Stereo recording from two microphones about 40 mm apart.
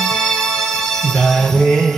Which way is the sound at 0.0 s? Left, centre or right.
Centre.